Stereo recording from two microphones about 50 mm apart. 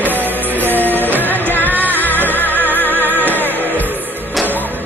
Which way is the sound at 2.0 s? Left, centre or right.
Left.